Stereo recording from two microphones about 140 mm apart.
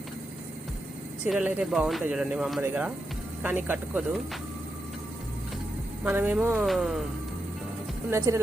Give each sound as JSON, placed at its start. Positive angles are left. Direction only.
{"t": 1.2, "sound": "speech", "side_deg": -10}
{"t": 6.1, "sound": "speech", "side_deg": -15}
{"t": 8.3, "sound": "speech", "side_deg": -20}